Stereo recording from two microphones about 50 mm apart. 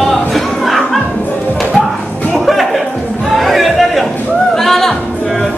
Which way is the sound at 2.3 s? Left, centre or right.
Centre.